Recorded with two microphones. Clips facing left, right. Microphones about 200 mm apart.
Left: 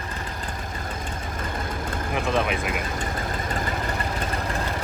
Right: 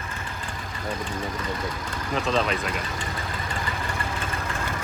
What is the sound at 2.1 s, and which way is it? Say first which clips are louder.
Speech: even; 15° left (ahead or behind).